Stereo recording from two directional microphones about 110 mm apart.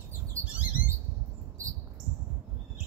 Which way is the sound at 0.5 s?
15° right (ahead or behind).